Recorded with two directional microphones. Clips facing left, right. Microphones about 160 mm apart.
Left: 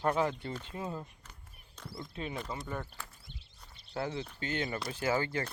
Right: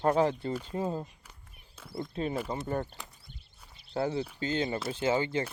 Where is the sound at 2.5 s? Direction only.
45° right (ahead or behind).